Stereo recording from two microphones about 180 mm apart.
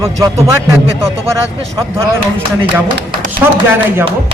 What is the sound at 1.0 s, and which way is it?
Speech, 15° right (ahead or behind).